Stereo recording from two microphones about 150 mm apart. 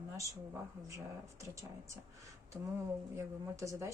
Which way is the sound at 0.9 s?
20° right (ahead or behind).